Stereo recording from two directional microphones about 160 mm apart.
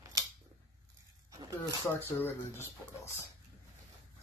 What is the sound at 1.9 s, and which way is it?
Speech, 15° left (ahead or behind).